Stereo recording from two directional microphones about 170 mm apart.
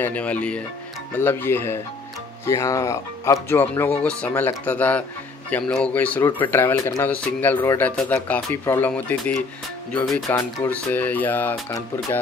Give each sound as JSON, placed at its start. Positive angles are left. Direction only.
{"t": 0.0, "sound": "speech", "side_deg": 10}
{"t": 10.3, "sound": "speech", "side_deg": 15}